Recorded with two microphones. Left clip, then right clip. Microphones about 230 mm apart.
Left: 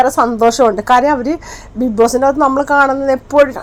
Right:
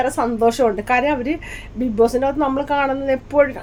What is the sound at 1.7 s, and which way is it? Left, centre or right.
A woman's voice, centre.